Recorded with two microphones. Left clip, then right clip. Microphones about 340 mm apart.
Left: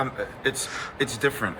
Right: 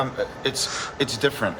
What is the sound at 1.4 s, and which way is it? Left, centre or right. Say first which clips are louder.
Speech: right 3 dB; centre.